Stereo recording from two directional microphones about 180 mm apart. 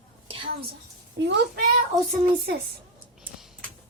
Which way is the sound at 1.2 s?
75° right (ahead or behind).